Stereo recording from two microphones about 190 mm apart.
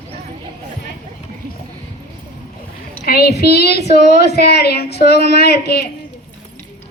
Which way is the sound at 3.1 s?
55° left (ahead or behind).